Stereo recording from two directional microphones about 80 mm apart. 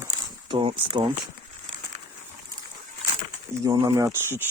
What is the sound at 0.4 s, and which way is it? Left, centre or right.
Speech, right.